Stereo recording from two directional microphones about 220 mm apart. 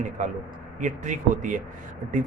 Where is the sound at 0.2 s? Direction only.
35° right (ahead or behind).